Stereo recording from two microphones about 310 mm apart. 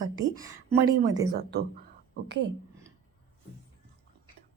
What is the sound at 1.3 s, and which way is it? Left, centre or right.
Speech, right.